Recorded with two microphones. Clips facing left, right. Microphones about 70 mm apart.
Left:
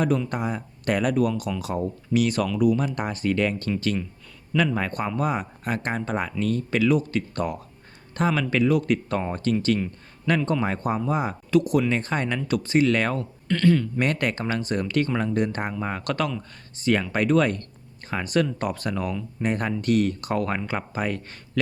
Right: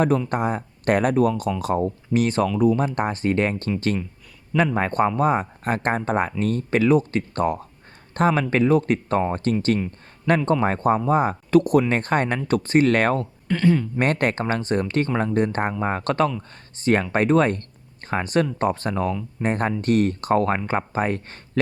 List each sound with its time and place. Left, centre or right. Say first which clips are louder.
0.3 s speech: right 5 dB; right
13.5 s speech: right 1 dB; centre
14.0 s speech: right 3 dB; right